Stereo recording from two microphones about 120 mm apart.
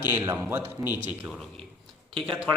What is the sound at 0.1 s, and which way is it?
Speech, 15° right (ahead or behind).